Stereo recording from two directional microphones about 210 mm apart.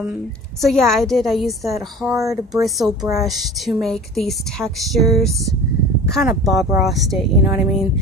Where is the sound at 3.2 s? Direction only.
Centre (ahead or behind).